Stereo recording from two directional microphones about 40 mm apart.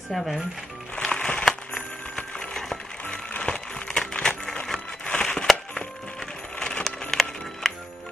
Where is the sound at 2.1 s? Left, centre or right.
Left.